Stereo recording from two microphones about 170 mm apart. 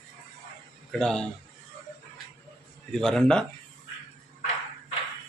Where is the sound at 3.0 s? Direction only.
5° left (ahead or behind).